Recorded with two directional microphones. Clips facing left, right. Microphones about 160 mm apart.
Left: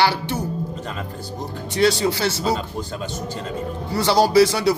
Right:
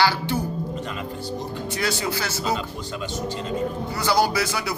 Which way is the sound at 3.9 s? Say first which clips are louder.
Left 7 dB; 30° left (ahead or behind).